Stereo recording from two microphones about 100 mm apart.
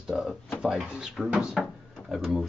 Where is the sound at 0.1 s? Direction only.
10° right (ahead or behind).